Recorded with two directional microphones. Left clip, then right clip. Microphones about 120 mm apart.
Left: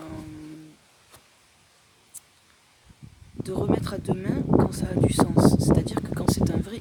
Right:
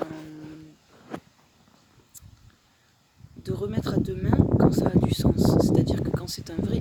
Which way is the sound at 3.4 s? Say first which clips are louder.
Left 5 dB; 5° left (ahead or behind).